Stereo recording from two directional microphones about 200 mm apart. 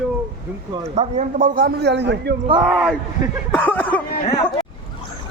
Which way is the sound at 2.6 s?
5° right (ahead or behind).